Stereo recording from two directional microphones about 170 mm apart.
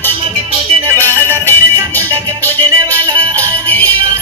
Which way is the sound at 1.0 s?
10° left (ahead or behind).